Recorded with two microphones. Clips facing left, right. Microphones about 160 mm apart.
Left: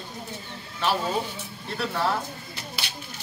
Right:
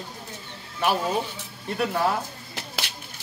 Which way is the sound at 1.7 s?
15° right (ahead or behind).